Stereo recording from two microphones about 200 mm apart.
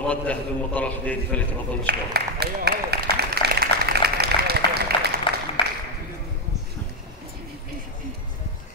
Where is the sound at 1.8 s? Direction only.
55° right (ahead or behind).